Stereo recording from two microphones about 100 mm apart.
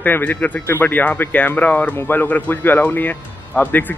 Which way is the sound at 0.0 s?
20° left (ahead or behind).